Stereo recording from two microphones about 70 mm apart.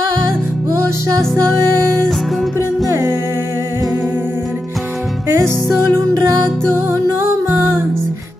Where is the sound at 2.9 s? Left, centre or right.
Right.